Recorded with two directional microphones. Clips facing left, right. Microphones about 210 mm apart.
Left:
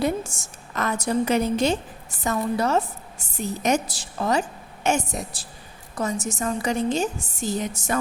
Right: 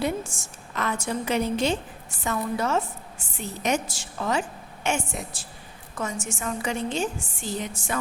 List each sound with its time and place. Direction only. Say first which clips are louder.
0.0 s a woman's voice: left 3 dB; 40° left (ahead or behind)